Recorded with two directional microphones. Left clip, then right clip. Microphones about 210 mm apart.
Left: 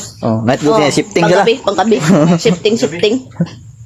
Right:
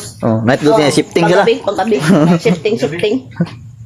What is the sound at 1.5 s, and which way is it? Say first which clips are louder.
Speech: left 1 dB; 55° left (ahead or behind).